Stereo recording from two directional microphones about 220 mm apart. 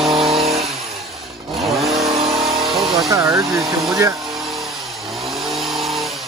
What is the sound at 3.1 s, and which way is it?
Speech, 15° right (ahead or behind).